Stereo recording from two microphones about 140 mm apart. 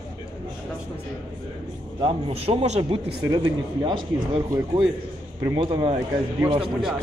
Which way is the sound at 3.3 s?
30° right (ahead or behind).